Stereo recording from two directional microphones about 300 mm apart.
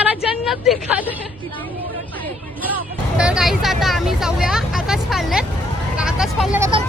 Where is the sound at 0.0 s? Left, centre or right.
Centre.